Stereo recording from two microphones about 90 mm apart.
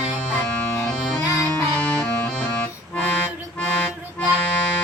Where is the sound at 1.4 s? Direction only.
10° left (ahead or behind).